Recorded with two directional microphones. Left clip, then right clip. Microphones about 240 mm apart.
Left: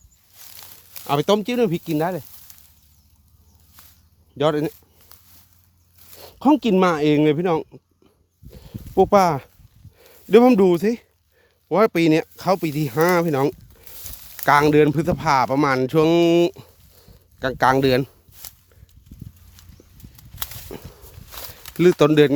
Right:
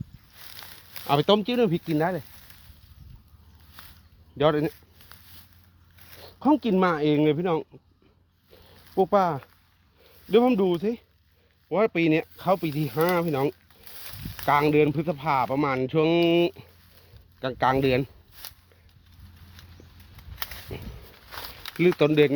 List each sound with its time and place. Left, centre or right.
0.5 s a sound: centre
1.0 s speech: left
4.4 s speech: left
6.1 s speech: left
8.6 s a sound: left
10.0 s speech: left
20.7 s a sound: left
21.2 s walk: centre
21.8 s speech: left